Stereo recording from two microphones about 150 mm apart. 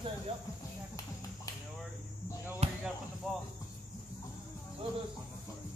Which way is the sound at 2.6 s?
45° right (ahead or behind).